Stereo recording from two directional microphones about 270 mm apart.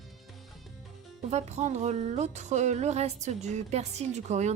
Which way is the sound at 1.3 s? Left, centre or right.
Right.